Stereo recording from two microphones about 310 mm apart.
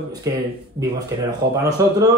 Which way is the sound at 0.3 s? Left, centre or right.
Centre.